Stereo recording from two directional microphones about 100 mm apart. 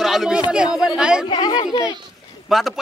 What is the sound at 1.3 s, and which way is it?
Speech, 50° left (ahead or behind).